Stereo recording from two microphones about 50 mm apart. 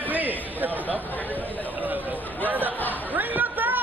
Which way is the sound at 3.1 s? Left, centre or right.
Right.